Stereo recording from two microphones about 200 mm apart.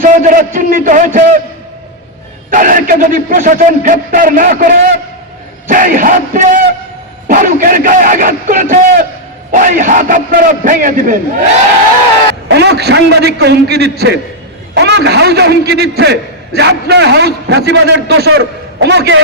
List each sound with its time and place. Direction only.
0.0 s speech: 40° right (ahead or behind)
2.5 s a man's voice: 40° right (ahead or behind)
12.5 s a man's voice: 55° right (ahead or behind)